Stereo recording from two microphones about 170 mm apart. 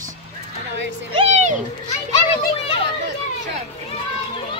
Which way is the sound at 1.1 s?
40° right (ahead or behind).